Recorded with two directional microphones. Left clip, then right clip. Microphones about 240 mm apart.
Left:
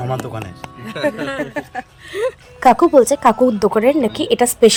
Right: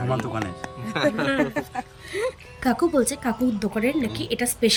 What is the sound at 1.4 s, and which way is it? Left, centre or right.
Speech, centre.